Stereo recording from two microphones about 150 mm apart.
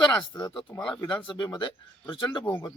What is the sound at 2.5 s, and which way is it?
Speech, 20° left (ahead or behind).